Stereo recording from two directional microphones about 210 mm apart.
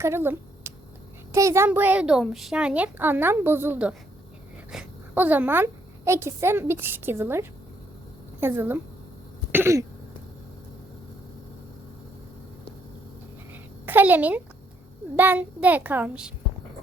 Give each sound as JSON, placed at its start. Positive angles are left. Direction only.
{"t": 0.0, "sound": "a woman's voice", "side_deg": -10}
{"t": 13.5, "sound": "a sound", "side_deg": -10}
{"t": 15.1, "sound": "speech", "side_deg": -10}